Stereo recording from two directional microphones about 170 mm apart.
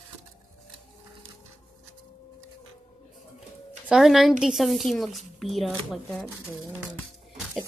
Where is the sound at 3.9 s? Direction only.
Centre (ahead or behind).